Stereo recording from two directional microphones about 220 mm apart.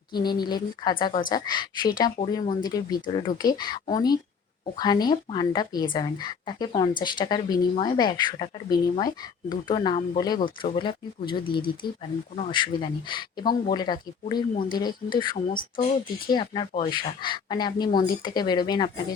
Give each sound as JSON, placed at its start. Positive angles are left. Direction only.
{"t": 0.1, "sound": "speech", "side_deg": 20}
{"t": 15.5, "sound": "speech", "side_deg": 40}
{"t": 16.2, "sound": "speech", "side_deg": 20}